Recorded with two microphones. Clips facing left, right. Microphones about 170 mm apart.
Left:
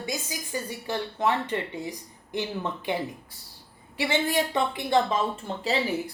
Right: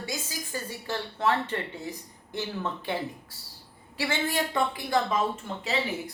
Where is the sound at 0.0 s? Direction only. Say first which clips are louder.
Left 3 dB; 20° left (ahead or behind).